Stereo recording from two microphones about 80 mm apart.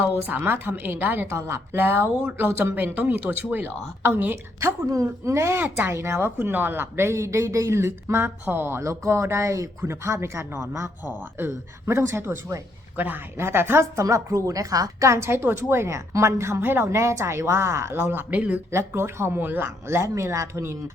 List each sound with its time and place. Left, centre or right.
0.0 s a woman's voice: right
4.9 s a woman's voice: right
14.0 s a woman's voice: right; by 18.6 s centre
18.7 s speech: right